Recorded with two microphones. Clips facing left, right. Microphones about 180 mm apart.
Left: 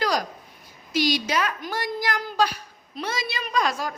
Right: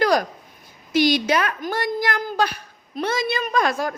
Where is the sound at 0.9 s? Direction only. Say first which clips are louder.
Right 5 dB; 55° right (ahead or behind).